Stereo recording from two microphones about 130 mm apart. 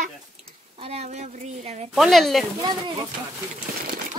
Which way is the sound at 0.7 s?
50° right (ahead or behind).